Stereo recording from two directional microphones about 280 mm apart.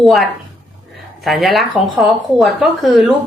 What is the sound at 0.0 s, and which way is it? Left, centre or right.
Speech, centre.